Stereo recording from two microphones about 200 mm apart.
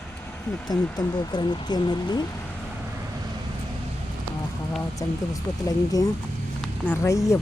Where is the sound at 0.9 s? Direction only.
20° left (ahead or behind).